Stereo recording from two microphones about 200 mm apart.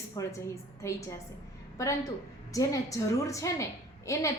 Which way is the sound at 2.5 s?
15° left (ahead or behind).